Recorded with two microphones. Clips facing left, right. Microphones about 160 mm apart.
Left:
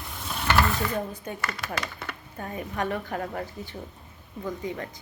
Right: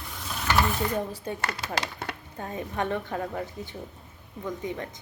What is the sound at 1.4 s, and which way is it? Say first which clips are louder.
Speech: even; 70° right (ahead or behind).